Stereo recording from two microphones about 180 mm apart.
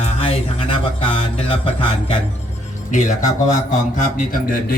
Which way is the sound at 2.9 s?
45° left (ahead or behind).